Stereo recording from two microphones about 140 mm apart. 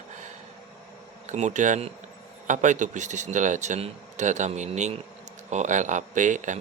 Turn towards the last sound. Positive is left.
turn(degrees=-60)  # may be behind; listen again after turning